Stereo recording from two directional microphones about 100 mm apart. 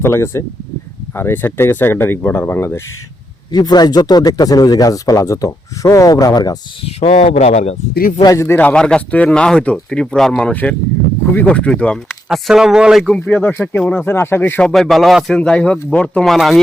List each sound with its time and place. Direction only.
0.0 s speech: 25° left (ahead or behind)
3.5 s speech: 45° left (ahead or behind)
6.8 s speech: 75° left (ahead or behind)
8.2 s speech: 35° left (ahead or behind)
8.4 s speech: 15° left (ahead or behind)
12.3 s speech: 5° right (ahead or behind)
13.1 s speech: 15° left (ahead or behind)
14.0 s speech: 25° left (ahead or behind)
14.6 s speech: centre (ahead or behind)
16.2 s speech: centre (ahead or behind)